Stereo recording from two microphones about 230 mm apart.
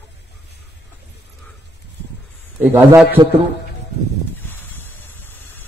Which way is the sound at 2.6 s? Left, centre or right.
Centre.